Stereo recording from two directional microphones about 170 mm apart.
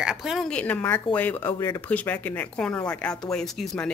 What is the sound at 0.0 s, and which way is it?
A woman's voice, centre (ahead or behind).